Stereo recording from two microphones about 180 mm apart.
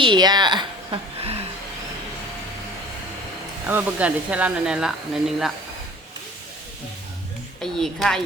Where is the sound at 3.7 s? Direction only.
10° right (ahead or behind).